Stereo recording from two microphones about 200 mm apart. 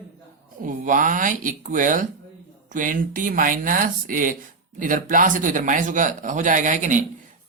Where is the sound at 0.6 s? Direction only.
40° right (ahead or behind).